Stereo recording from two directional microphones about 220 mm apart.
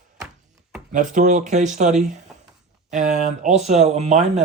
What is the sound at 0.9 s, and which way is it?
Speech, 35° right (ahead or behind).